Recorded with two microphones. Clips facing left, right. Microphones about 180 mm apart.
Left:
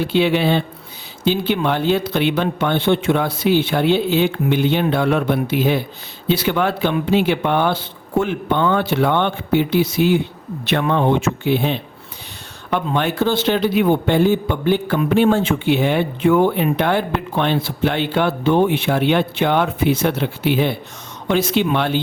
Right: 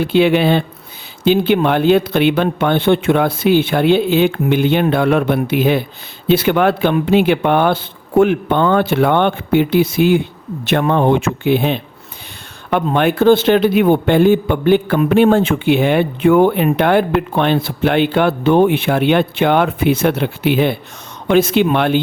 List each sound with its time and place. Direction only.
0.0 s a man's voice: 55° right (ahead or behind)